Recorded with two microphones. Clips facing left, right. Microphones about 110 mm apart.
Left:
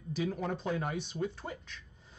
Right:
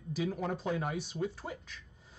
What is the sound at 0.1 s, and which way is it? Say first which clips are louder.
Speech: even; 5° right (ahead or behind).